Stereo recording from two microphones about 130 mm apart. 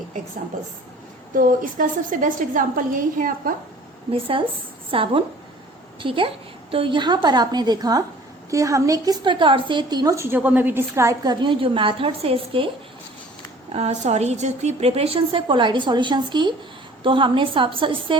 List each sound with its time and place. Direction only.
1.4 s a woman's voice: 90° right
4.1 s a woman's voice: 45° right (ahead or behind)
13.7 s a woman's voice: 55° right (ahead or behind); by 18.2 s 40° right (ahead or behind)